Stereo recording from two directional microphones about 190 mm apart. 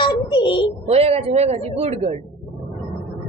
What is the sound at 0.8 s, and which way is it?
Speech, 30° right (ahead or behind).